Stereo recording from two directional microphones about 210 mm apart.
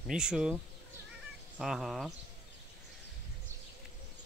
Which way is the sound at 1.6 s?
Centre (ahead or behind).